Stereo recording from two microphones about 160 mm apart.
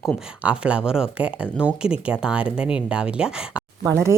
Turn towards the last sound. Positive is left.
turn(degrees=-15)  # may be behind; listen again after turning